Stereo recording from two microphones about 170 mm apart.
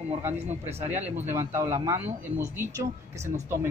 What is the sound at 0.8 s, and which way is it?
Speech, 15° right (ahead or behind).